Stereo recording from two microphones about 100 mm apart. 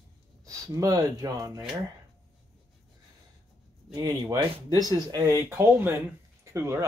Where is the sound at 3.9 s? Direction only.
40° right (ahead or behind).